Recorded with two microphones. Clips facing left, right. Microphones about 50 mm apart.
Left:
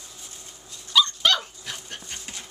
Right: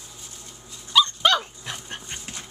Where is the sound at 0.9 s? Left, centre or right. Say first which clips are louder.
Right 2 dB; centre.